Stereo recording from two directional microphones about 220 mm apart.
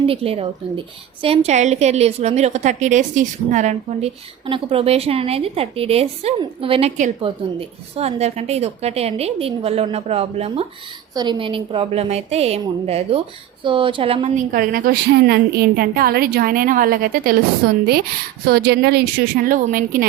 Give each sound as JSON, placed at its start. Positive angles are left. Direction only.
{"t": 0.0, "sound": "a woman's voice", "side_deg": -25}
{"t": 14.5, "sound": "a woman's voice", "side_deg": -40}